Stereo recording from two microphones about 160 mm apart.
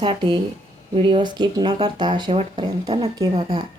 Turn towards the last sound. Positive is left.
turn(degrees=-40)  # may be behind; listen again after turning